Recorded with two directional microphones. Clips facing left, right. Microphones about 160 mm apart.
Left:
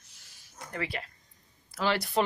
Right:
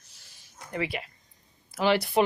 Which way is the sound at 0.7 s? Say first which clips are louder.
Right 4 dB; 15° right (ahead or behind).